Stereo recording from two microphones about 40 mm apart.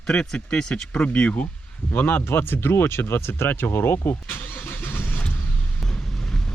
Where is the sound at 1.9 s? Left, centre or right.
Left.